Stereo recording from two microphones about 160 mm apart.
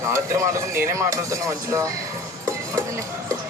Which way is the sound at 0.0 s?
20° right (ahead or behind).